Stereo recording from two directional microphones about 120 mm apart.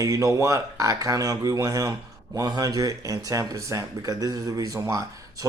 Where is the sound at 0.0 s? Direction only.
25° right (ahead or behind).